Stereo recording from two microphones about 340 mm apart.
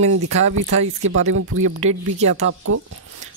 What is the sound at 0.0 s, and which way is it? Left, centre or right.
Speech, right.